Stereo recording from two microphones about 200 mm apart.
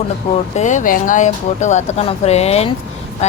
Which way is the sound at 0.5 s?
35° left (ahead or behind).